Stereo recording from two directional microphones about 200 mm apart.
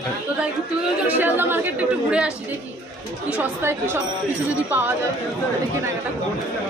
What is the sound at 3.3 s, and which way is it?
Speech, 10° right (ahead or behind).